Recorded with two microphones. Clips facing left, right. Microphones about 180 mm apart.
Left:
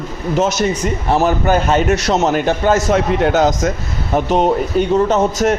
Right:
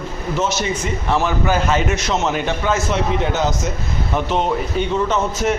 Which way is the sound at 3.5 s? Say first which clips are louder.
Left 6 dB; 90° left.